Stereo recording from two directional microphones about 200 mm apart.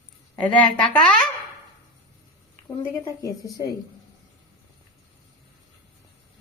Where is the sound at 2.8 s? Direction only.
15° left (ahead or behind).